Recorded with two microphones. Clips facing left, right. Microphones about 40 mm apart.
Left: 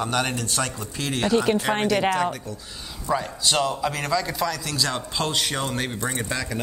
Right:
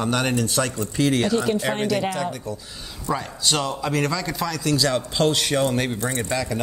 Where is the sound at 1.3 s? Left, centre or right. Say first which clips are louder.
Left 1 dB; left.